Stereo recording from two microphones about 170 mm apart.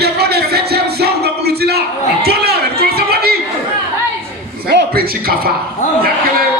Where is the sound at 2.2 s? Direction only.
70° right (ahead or behind).